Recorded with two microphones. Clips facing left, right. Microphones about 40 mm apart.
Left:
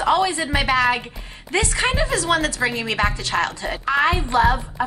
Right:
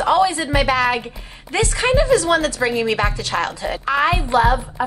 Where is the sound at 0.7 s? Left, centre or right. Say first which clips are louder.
Even; left.